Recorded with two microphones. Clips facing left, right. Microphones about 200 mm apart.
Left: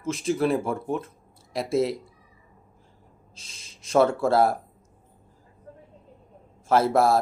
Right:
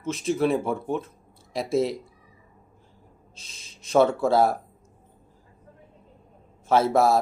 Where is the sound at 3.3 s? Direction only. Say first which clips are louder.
Left 1 dB; 30° left (ahead or behind).